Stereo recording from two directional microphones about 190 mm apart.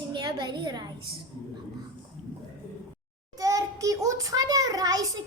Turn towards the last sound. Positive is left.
turn(degrees=-20)  # may be behind; listen again after turning